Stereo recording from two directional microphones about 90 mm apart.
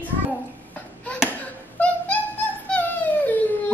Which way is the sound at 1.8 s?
20° left (ahead or behind).